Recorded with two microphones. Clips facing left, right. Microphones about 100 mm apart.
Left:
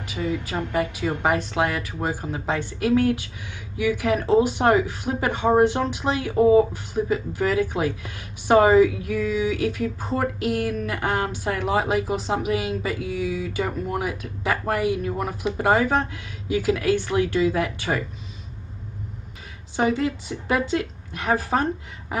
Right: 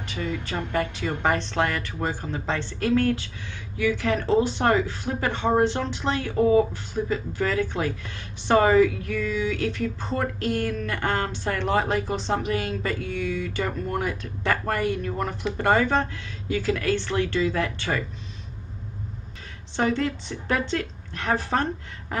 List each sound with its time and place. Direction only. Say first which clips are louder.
0.0 s speech: left 3 dB; 10° left (ahead or behind)
19.7 s speech: left 2 dB; 5° left (ahead or behind)